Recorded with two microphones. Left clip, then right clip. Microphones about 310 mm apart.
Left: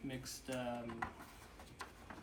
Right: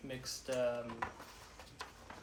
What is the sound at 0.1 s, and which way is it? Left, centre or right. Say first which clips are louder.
Speech: right 7 dB; centre.